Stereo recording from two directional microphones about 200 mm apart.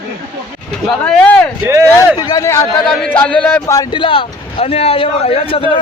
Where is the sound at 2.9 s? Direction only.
5° left (ahead or behind); by 5.7 s 25° left (ahead or behind).